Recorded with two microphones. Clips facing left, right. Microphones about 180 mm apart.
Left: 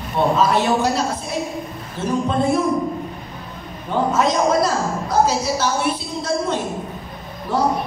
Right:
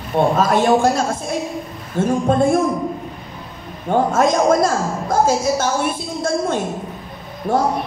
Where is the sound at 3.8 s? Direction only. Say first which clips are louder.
Right 3 dB; 50° right (ahead or behind).